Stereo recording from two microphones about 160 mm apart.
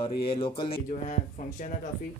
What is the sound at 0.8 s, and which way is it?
Speech, 50° left (ahead or behind).